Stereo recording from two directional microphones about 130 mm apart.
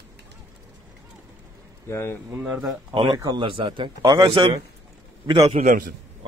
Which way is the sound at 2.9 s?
40° right (ahead or behind).